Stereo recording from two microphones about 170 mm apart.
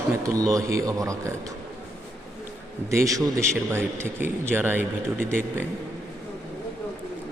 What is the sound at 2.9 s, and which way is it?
Speech, 20° right (ahead or behind).